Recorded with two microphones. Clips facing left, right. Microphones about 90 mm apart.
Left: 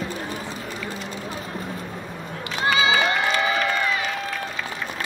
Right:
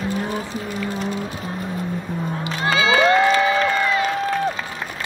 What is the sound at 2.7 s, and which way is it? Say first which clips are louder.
Crowd: right 5 dB; 35° right (ahead or behind).